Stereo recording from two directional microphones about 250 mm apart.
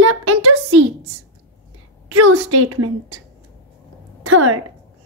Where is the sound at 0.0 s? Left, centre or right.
Right.